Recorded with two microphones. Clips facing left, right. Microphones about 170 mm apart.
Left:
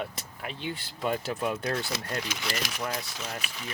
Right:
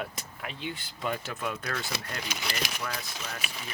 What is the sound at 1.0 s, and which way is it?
Speech, 30° left (ahead or behind).